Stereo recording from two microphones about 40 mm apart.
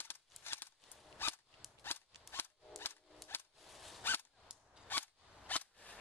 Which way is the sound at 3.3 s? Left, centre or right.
Left.